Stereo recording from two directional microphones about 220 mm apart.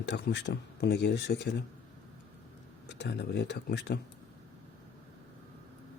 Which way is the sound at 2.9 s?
50° left (ahead or behind).